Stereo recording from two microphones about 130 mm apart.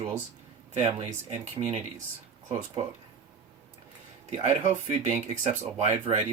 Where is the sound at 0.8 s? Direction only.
50° right (ahead or behind).